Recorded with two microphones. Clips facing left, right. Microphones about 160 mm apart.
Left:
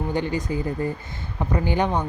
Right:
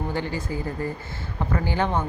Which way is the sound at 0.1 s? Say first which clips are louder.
Left 3 dB; 20° left (ahead or behind).